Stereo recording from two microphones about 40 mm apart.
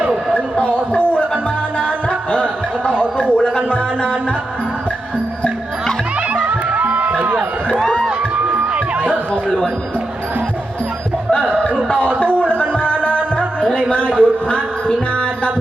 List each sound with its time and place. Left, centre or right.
0.6 s a sound: left
2.3 s music: left
6.3 s music: right
9.3 s music: left
11.9 s music: left